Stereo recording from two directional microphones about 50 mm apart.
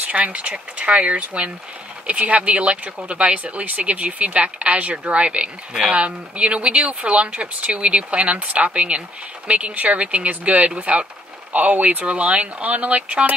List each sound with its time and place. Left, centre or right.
0.0 s speech: right